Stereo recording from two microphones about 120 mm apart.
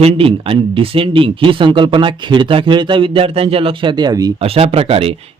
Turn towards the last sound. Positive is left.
turn(degrees=-55)  # may be behind; listen again after turning